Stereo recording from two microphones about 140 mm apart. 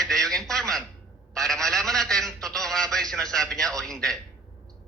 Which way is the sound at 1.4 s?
5° left (ahead or behind).